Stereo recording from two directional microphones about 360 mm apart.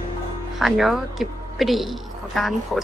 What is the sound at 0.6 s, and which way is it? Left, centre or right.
A woman's voice, centre.